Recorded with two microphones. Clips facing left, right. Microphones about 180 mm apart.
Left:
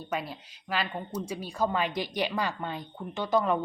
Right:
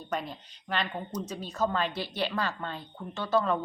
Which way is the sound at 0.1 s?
5° left (ahead or behind).